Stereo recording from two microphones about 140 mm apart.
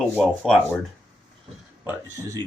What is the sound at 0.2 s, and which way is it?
Speech, centre (ahead or behind).